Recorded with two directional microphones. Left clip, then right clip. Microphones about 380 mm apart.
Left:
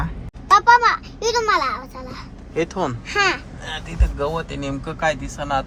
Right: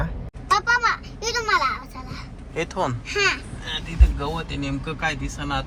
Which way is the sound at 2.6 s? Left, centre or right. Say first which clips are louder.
Left 3 dB; centre.